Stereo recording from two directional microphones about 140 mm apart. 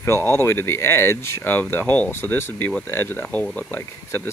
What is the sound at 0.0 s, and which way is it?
Speech, 20° left (ahead or behind).